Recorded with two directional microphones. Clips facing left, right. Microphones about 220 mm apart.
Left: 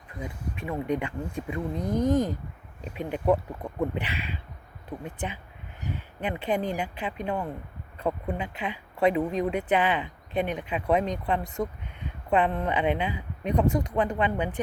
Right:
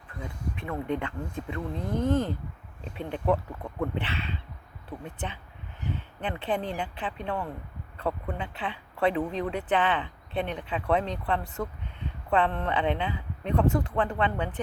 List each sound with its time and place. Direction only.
0.2 s speech: 10° left (ahead or behind)
2.8 s speech: 10° left (ahead or behind)
6.1 s speech: 10° left (ahead or behind)